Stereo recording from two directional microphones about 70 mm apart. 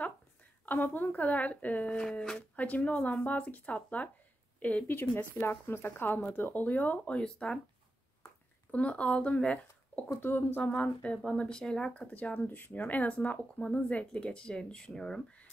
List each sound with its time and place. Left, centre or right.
0.7 s speech: left
8.7 s speech: centre
10.0 s speech: left
10.6 s speech: centre